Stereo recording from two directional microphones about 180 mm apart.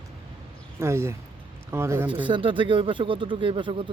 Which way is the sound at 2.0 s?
25° right (ahead or behind).